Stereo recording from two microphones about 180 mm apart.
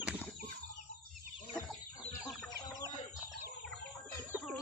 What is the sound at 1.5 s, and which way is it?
Chicken, 20° left (ahead or behind).